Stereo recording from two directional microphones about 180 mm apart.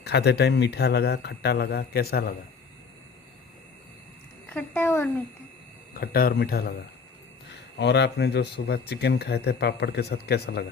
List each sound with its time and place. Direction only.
0.0 s speech: 70° left (ahead or behind)
4.4 s a woman's voice: 10° left (ahead or behind)
5.9 s speech: 55° left (ahead or behind)
7.8 s speech: 70° left (ahead or behind)